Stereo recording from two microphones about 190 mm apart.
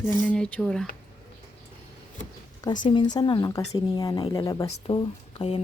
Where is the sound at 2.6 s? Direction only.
25° left (ahead or behind).